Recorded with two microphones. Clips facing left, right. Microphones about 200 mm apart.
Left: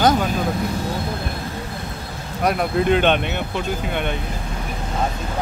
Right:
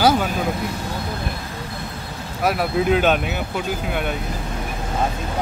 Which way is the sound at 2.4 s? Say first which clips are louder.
Left 1 dB; 5° right (ahead or behind).